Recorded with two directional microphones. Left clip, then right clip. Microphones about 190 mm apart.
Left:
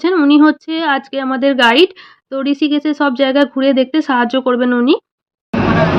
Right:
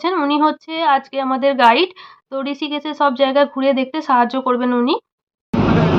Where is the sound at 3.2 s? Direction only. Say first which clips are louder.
Left 3 dB; 30° left (ahead or behind).